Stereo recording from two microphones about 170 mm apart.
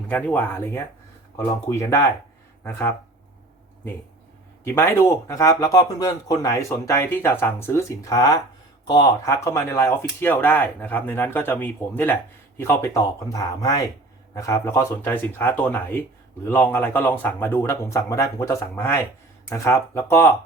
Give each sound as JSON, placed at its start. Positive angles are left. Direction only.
{"t": 0.1, "sound": "speech", "side_deg": 10}
{"t": 4.6, "sound": "speech", "side_deg": 15}